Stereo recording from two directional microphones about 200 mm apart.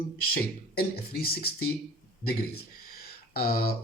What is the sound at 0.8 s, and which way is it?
Speech, 50° left (ahead or behind).